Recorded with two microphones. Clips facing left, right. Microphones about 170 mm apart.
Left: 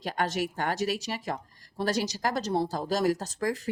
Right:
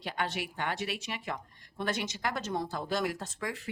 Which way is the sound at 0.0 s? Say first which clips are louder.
Left 6 dB; 45° left (ahead or behind).